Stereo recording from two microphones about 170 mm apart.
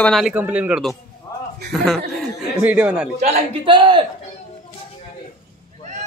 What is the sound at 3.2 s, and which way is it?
Speech, 35° right (ahead or behind).